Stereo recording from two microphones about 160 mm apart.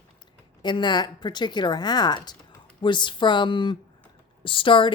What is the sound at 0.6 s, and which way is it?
A woman's voice, 30° left (ahead or behind).